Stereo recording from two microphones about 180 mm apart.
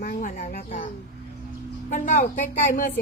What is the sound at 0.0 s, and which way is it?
Speech, 50° left (ahead or behind).